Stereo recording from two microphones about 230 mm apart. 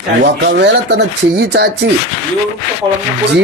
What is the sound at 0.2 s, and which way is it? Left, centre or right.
Speech, right.